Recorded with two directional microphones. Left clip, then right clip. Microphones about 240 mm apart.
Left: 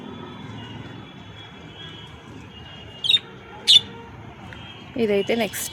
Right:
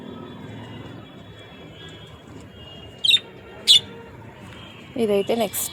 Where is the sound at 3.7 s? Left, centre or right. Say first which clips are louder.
Left 1 dB; right.